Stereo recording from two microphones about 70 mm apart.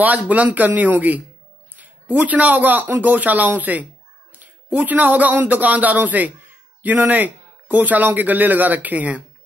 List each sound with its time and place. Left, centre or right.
0.0 s speech: right